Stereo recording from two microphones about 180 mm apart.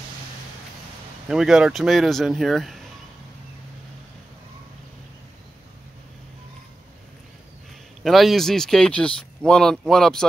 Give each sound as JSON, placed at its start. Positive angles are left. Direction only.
{"t": 1.3, "sound": "speech", "side_deg": -5}
{"t": 8.0, "sound": "speech", "side_deg": 0}